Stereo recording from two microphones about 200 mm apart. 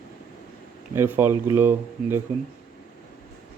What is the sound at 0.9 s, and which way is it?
Speech, 10° right (ahead or behind).